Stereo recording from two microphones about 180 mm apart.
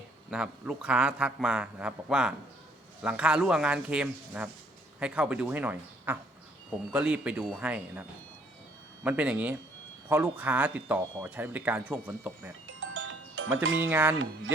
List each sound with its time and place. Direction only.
0.3 s a man's voice: 5° right (ahead or behind)
9.0 s speech: 10° right (ahead or behind)
12.8 s music: 90° right
13.7 s speech: 10° right (ahead or behind)